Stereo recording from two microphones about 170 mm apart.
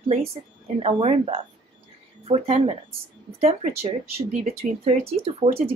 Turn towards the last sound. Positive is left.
turn(degrees=-35)  # may be behind; listen again after turning